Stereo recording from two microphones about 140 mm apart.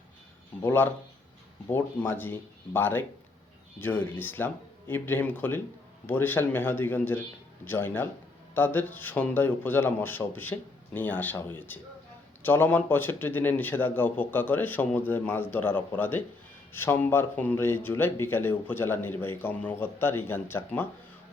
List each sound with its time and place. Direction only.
0.6 s speech: 15° left (ahead or behind)